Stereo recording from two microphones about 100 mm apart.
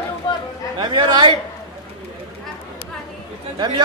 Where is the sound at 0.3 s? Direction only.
50° left (ahead or behind).